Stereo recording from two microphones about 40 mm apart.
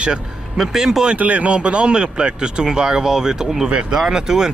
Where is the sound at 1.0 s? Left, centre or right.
Right.